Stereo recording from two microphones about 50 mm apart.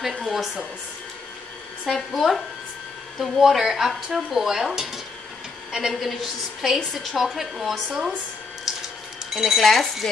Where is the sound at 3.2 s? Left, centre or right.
Centre.